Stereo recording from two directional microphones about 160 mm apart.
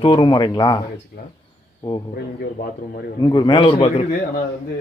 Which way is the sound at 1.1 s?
90° left.